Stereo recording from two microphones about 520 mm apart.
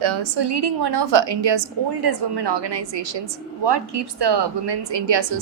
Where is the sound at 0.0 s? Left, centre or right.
Right.